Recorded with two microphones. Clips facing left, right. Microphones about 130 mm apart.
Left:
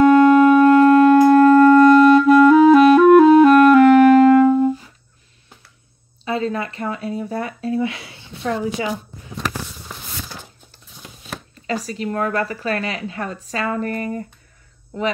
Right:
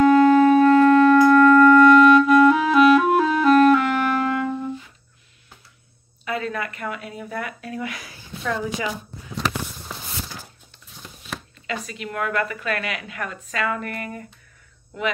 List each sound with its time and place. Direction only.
0.0 s clarinet: 50° left (ahead or behind)
6.2 s speech: 30° left (ahead or behind)
11.6 s a woman's voice: 35° left (ahead or behind)